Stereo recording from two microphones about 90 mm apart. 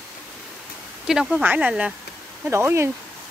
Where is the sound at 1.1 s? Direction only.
5° right (ahead or behind).